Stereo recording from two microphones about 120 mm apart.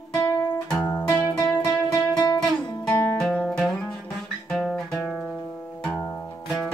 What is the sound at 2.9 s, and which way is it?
Music, 10° left (ahead or behind).